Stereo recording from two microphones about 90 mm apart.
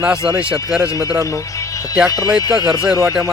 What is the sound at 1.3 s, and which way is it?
Speech, 40° left (ahead or behind).